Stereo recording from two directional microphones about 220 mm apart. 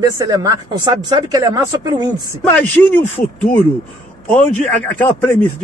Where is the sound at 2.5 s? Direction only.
5° left (ahead or behind).